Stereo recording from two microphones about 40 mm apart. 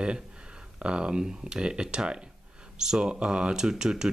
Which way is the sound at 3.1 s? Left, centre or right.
Right.